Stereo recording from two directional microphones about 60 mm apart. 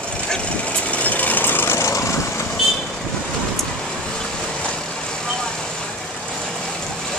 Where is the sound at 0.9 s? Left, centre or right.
Left.